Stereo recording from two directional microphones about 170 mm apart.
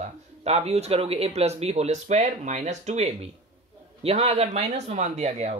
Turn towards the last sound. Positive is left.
turn(degrees=-40)  # may be behind; listen again after turning